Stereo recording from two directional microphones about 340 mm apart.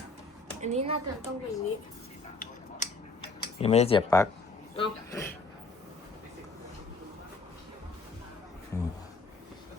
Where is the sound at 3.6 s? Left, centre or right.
Centre.